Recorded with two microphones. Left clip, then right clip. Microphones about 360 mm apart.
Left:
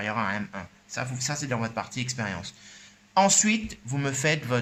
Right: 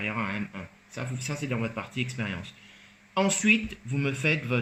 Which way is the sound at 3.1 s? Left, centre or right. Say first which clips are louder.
Left 2 dB; left.